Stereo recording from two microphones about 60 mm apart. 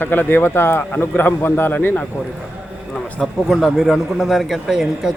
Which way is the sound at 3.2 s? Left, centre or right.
Centre.